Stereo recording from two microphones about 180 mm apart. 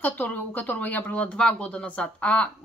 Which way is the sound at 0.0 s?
10° left (ahead or behind).